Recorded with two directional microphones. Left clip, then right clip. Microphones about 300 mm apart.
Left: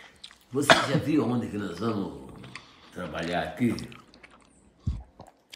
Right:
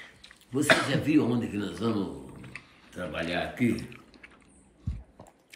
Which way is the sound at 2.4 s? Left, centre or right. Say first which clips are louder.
Left 1 dB; centre.